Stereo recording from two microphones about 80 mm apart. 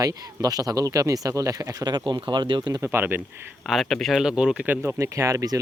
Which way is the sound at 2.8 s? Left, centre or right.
Right.